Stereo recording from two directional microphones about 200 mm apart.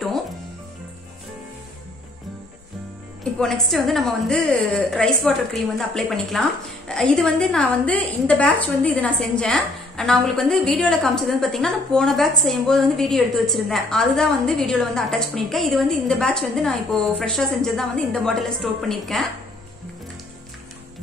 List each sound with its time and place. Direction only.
3.3 s a woman's voice: 5° left (ahead or behind)